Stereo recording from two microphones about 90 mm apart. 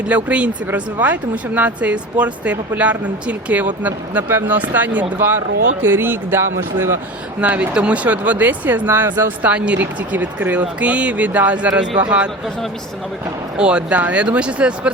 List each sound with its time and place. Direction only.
0.1 s speech: 15° right (ahead or behind)
7.4 s speech: 15° right (ahead or behind)
13.6 s speech: 10° right (ahead or behind)